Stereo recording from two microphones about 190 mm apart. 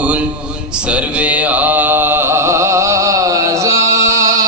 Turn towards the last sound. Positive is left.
turn(degrees=-15)  # may be behind; listen again after turning